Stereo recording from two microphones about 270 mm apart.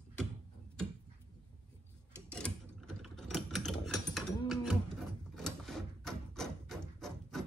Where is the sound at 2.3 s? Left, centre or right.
Centre.